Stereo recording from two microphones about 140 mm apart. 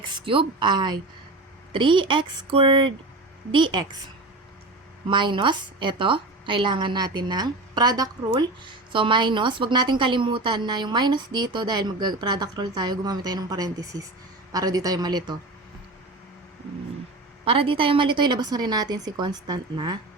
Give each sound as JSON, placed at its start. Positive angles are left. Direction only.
{"t": 0.0, "sound": "a woman's voice", "side_deg": -35}
{"t": 5.0, "sound": "a woman's voice", "side_deg": -35}
{"t": 17.4, "sound": "a woman's voice", "side_deg": -40}